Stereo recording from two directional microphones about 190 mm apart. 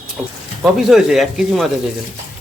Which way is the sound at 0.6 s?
Centre (ahead or behind).